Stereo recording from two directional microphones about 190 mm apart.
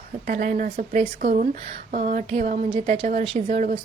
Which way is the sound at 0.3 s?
45° right (ahead or behind).